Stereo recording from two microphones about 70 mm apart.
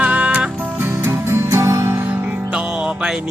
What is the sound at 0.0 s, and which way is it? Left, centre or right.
Music, right.